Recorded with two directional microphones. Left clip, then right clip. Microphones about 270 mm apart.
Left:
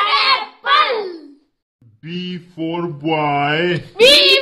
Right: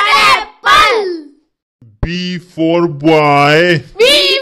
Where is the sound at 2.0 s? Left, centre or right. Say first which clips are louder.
Right 8 dB; right.